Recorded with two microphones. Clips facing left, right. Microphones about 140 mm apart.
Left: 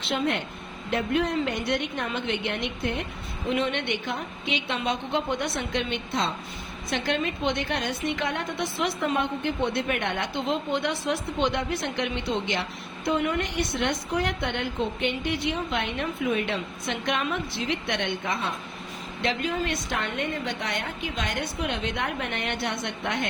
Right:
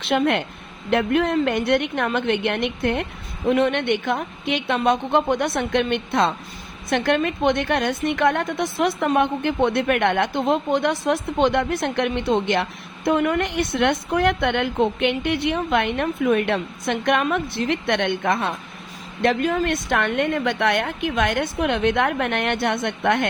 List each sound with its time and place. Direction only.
0.0 s a woman's voice: 65° right (ahead or behind)